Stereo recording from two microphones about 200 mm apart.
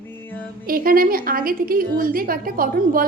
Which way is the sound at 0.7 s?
45° right (ahead or behind).